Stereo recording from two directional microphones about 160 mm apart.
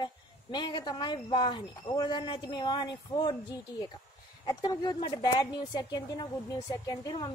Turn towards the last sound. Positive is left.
turn(degrees=25)  # may be behind; listen again after turning